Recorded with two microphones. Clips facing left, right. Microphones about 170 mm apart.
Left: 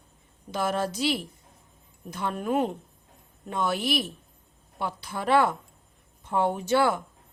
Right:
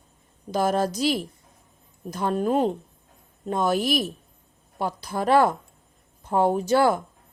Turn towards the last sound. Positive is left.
turn(degrees=-40)  # may be behind; listen again after turning